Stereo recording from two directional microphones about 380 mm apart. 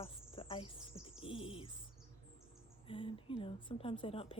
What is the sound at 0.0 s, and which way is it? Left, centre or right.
Insect, centre.